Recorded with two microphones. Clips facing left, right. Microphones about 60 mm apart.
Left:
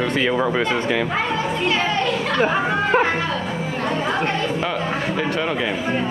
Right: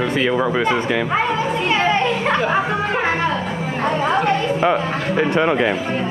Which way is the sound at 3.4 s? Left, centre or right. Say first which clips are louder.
Right 1 dB; centre.